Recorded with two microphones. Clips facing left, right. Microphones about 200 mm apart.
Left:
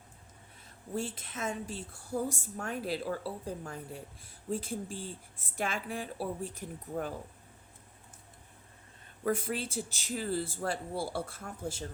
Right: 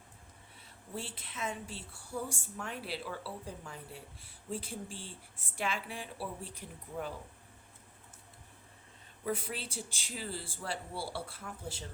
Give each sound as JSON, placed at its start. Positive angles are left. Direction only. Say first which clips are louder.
{"t": 0.9, "sound": "a woman's voice", "louder": "left 6 dB", "side_deg": 45}
{"t": 9.2, "sound": "a woman's voice", "louder": "left 5 dB", "side_deg": 45}